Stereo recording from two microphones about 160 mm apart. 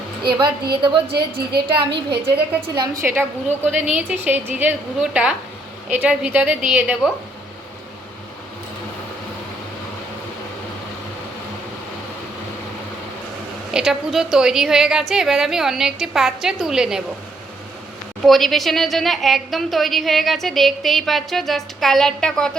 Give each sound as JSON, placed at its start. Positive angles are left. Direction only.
{"t": 0.3, "sound": "a woman's voice", "side_deg": -30}
{"t": 1.0, "sound": "a woman's voice", "side_deg": -80}
{"t": 2.7, "sound": "a woman's voice", "side_deg": -25}
{"t": 13.7, "sound": "a woman's voice", "side_deg": -5}
{"t": 18.2, "sound": "a woman's voice", "side_deg": 0}